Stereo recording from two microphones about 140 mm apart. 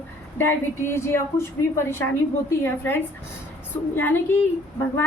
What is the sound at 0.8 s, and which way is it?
Speech, 15° left (ahead or behind).